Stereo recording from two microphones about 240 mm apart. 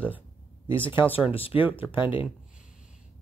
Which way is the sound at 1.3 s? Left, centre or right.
Left.